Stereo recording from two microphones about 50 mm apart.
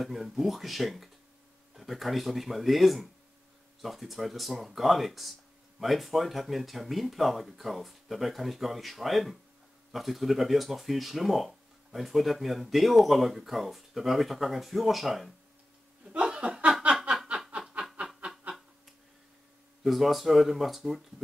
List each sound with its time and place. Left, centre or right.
0.0 s speech: centre
16.1 s chuckle: right
17.8 s snicker: right
19.8 s speech: centre